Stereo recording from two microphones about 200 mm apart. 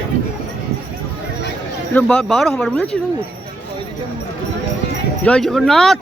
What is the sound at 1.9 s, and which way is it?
Speech, 5° left (ahead or behind).